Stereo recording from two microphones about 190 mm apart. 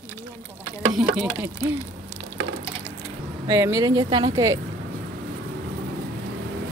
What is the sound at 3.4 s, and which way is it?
Speech, 15° right (ahead or behind).